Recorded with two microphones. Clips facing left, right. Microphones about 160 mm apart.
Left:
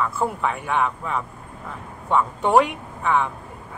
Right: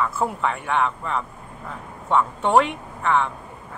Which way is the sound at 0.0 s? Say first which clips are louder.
Even; centre (ahead or behind).